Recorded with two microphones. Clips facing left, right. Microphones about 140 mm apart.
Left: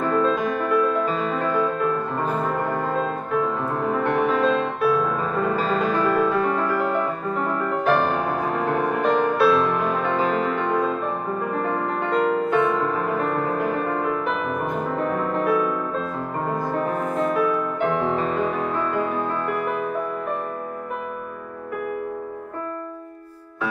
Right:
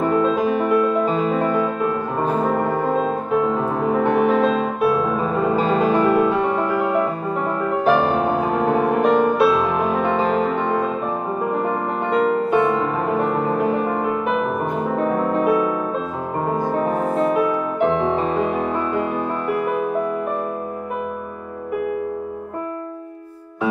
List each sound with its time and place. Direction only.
0.1 s music: 5° right (ahead or behind)
2.5 s brass instrument: centre (ahead or behind)
2.9 s music: centre (ahead or behind)
13.6 s music: 20° right (ahead or behind)
13.9 s music: 5° right (ahead or behind)